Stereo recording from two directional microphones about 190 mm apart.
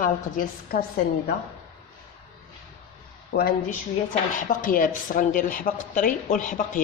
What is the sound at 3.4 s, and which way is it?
Speech, 50° left (ahead or behind).